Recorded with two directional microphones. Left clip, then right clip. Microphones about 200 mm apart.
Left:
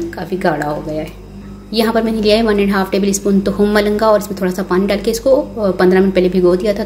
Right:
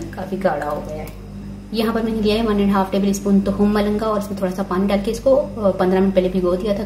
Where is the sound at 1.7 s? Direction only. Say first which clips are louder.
Left 6 dB; 45° left (ahead or behind).